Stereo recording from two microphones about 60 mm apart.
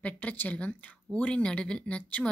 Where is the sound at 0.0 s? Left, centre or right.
Left.